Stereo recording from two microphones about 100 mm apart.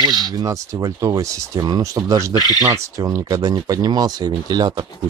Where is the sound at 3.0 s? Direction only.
40° right (ahead or behind).